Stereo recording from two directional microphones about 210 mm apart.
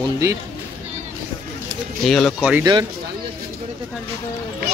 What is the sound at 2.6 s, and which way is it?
Speech, 20° right (ahead or behind).